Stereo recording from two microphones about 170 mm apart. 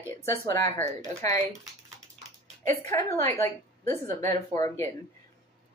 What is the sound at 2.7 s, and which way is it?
A woman's voice, 15° left (ahead or behind).